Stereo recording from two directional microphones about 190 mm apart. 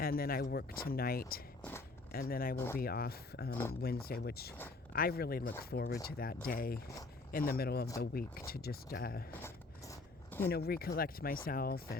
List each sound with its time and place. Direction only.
0.0 s speech: 50° left (ahead or behind)
9.4 s zipper: 15° left (ahead or behind)
10.5 s speech: 55° left (ahead or behind)